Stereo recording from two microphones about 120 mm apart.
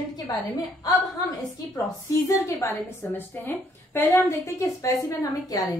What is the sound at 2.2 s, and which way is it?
A woman's voice, 25° left (ahead or behind).